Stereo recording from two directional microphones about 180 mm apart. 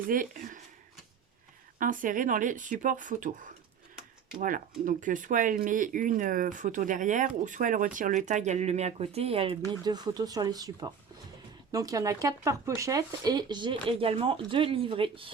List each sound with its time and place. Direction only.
0.1 s speech: 50° right (ahead or behind)
1.8 s speech: 50° right (ahead or behind); by 9.6 s 35° right (ahead or behind)
9.8 s speech: 20° right (ahead or behind)